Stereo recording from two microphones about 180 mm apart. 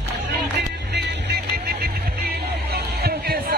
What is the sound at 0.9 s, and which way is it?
Music, 70° right (ahead or behind).